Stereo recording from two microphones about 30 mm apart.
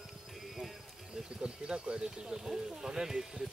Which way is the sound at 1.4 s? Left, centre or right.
Right.